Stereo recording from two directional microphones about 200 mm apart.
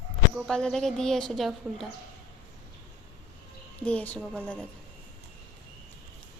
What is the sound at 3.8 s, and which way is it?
Speech, 5° left (ahead or behind).